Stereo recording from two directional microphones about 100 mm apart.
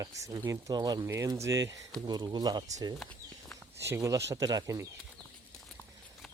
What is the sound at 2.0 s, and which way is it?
Speech, 45° right (ahead or behind).